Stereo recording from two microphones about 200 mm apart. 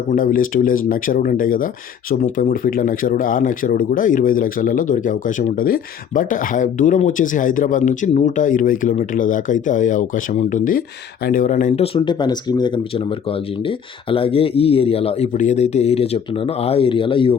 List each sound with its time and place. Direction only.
0.1 s speech: 45° left (ahead or behind)
11.9 s speech: 20° left (ahead or behind)